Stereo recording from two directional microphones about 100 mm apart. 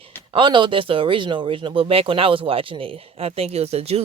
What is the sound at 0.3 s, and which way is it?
Speech, 55° right (ahead or behind).